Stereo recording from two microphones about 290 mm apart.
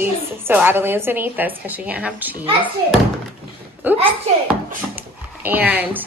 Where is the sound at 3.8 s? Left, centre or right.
Centre.